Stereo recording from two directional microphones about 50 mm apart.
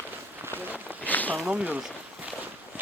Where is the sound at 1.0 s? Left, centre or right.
Left.